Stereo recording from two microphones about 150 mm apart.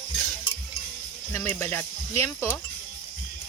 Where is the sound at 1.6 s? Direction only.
15° left (ahead or behind).